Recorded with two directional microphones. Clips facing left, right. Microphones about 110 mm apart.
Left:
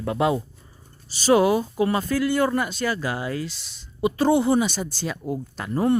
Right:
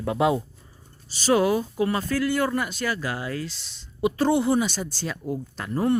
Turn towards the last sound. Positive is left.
turn(degrees=15)  # may be behind; listen again after turning